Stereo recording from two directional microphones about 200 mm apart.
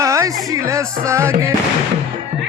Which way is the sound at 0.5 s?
15° right (ahead or behind).